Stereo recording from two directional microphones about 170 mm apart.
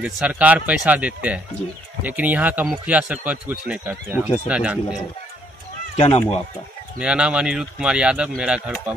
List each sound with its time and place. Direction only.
0.0 s speech: 5° right (ahead or behind)
5.9 s speech: 35° left (ahead or behind)
7.0 s speech: 5° right (ahead or behind)